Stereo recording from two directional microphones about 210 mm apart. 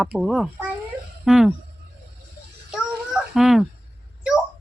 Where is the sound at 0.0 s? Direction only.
Centre (ahead or behind).